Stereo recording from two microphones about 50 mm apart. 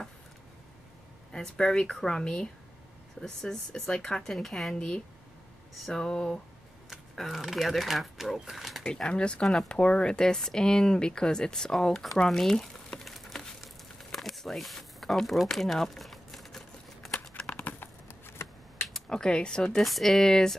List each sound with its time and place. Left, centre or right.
1.3 s speech: centre
4.7 s speech: centre
7.2 s speech: centre
8.8 s speech: centre
13.0 s a sound: centre
15.4 s crumpling: centre
17.5 s a sound: left
17.7 s computer keyboard: left
19.0 s speech: centre
19.8 s speech: centre